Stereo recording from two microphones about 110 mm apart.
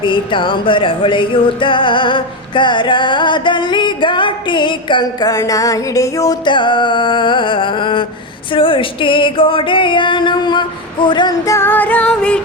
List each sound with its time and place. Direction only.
0.0 s music: 50° left (ahead or behind); by 6.3 s 30° left (ahead or behind)
6.4 s music: 45° left (ahead or behind)
11.4 s music: 25° left (ahead or behind)